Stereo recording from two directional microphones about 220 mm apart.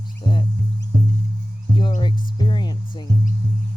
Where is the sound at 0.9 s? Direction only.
40° right (ahead or behind).